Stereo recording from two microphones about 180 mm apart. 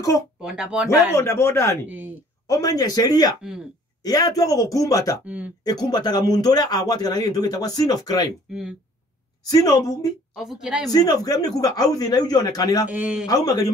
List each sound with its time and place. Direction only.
0.4 s a woman's voice: 5° right (ahead or behind)
1.1 s speech: 15° left (ahead or behind)
1.9 s speech: 10° right (ahead or behind)
2.4 s speech: 20° left (ahead or behind)
5.2 s speech: 10° right (ahead or behind)
5.7 s speech: 20° left (ahead or behind)
8.5 s a woman's voice: 5° right (ahead or behind)
9.5 s speech: 20° left (ahead or behind)
10.3 s a woman's voice: 5° right (ahead or behind)
10.9 s speech: 20° left (ahead or behind)
12.8 s a woman's voice: 5° right (ahead or behind)